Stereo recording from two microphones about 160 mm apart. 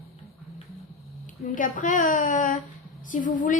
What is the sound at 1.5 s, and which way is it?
A woman's voice, 55° left (ahead or behind).